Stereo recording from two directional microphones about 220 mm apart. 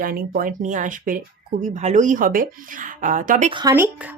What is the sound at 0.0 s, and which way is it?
A woman's voice, 40° right (ahead or behind).